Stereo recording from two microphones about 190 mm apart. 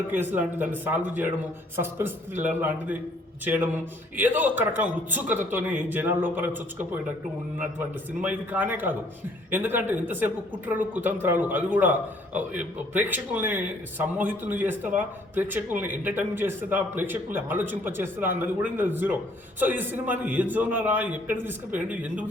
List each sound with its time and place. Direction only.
0.1 s a man's voice: 10° right (ahead or behind)
8.2 s a man's voice: 10° right (ahead or behind)